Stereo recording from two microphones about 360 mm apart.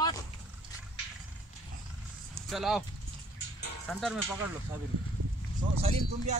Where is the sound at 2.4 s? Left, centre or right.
Centre.